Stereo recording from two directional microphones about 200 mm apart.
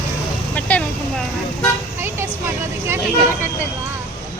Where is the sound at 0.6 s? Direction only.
5° left (ahead or behind).